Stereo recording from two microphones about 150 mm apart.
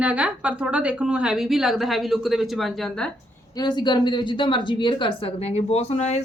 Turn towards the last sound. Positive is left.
turn(degrees=45)  # may be behind; listen again after turning